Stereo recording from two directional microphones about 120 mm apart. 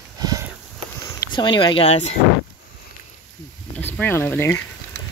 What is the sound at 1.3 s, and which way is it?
Speech, 40° left (ahead or behind).